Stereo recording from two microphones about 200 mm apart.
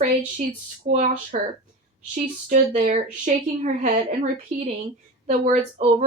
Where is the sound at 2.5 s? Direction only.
40° right (ahead or behind).